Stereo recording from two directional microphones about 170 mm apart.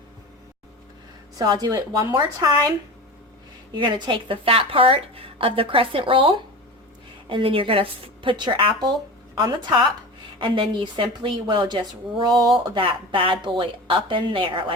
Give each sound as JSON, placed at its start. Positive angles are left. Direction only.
{"t": 1.4, "sound": "a woman's voice", "side_deg": -25}
{"t": 3.8, "sound": "a woman's voice", "side_deg": -25}